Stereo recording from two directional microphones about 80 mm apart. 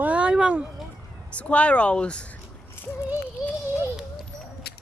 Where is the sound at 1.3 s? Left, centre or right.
Centre.